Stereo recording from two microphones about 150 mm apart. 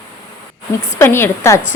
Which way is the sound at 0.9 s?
15° left (ahead or behind).